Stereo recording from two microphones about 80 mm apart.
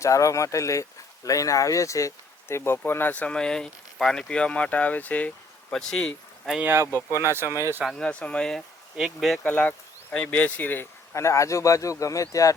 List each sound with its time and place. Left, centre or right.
0.0 s speech: left; by 5.3 s centre
5.7 s speech: centre
6.6 s speech: right
7.9 s speech: centre
9.0 s speech: centre
9.4 s speech: centre; by 12.5 s left